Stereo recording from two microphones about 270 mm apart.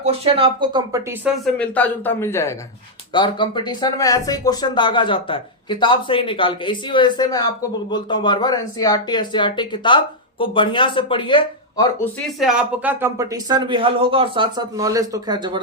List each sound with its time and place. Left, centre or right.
0.0 s speech: right
1.2 s speech: centre
12.4 s speech: centre